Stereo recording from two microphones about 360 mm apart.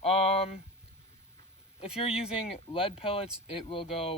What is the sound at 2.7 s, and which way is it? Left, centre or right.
Speech, centre.